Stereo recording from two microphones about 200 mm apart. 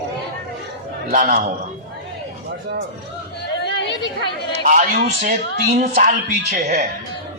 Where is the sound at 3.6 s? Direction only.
60° left (ahead or behind).